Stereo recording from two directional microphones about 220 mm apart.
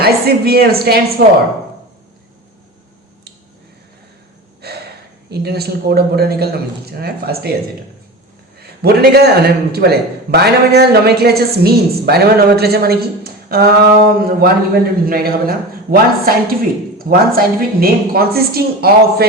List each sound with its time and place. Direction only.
0.0 s a man's voice: 45° right (ahead or behind)
4.6 s a sound: 45° right (ahead or behind)
5.3 s a man's voice: 45° right (ahead or behind)
8.5 s a man's voice: 45° right (ahead or behind)